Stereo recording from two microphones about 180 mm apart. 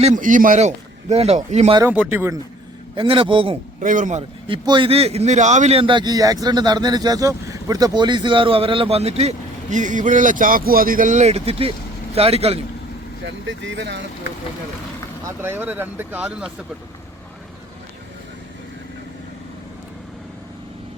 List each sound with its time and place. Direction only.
0.0 s a man's voice: 45° right (ahead or behind)
1.8 s speech: 10° right (ahead or behind)
2.9 s a man's voice: 30° right (ahead or behind)
3.8 s a man's voice: 45° right (ahead or behind)
4.4 s a man's voice: 25° right (ahead or behind)
13.2 s speech: 85° right
15.4 s speech: 10° right (ahead or behind)